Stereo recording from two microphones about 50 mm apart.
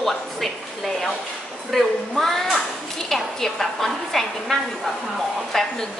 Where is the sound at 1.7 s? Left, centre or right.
Centre.